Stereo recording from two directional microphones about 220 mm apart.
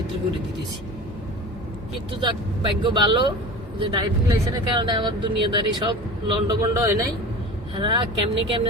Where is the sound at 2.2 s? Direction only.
20° right (ahead or behind).